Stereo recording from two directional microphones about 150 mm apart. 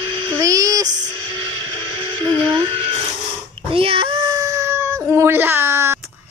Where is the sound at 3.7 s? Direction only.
40° right (ahead or behind).